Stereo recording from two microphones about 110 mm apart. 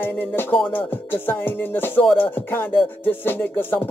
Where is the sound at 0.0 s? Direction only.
20° left (ahead or behind).